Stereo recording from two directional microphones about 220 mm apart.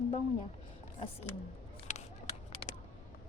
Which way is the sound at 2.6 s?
25° left (ahead or behind).